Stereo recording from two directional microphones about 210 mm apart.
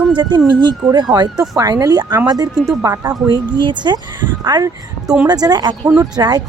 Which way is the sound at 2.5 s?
5° right (ahead or behind).